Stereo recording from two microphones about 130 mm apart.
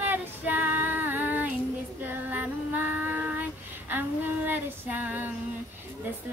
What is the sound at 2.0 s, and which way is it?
Female singing, 15° right (ahead or behind).